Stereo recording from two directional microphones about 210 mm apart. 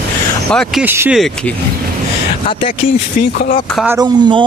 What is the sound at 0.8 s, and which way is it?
Speech, 10° right (ahead or behind).